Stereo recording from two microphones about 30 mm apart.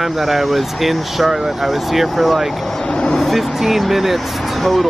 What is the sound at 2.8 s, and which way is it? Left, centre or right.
Speech, left.